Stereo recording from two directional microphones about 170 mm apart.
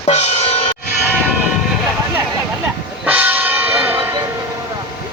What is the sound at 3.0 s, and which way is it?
Church bell, 10° right (ahead or behind).